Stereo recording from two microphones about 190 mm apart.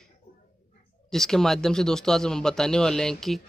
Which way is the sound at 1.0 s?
Centre (ahead or behind).